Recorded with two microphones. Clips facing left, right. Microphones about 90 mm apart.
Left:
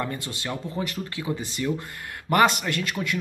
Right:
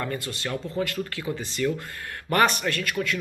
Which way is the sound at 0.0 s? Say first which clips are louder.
Even; 20° left (ahead or behind).